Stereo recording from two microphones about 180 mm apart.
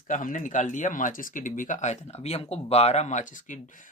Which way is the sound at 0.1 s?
45° left (ahead or behind).